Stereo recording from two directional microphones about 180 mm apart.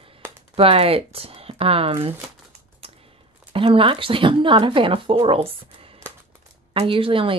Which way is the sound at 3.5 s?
30° right (ahead or behind).